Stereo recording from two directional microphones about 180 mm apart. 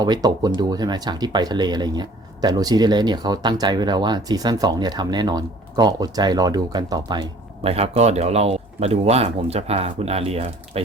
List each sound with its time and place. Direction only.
0.0 s speech: 25° right (ahead or behind)